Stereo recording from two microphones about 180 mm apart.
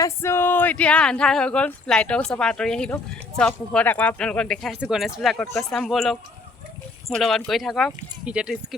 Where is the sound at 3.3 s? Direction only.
5° left (ahead or behind).